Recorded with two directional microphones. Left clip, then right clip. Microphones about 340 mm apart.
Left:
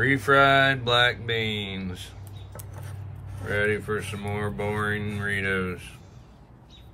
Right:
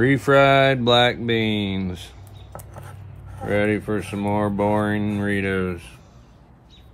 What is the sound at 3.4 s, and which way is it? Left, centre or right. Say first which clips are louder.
Speech: right 4 dB; centre.